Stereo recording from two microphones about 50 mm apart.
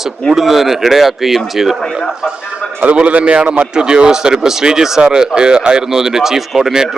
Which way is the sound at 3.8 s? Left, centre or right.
Centre.